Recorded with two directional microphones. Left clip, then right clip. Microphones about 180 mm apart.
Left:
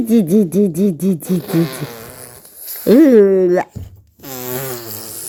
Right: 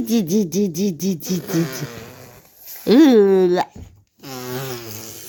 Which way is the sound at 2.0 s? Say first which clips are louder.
Left 4 dB; 20° right (ahead or behind).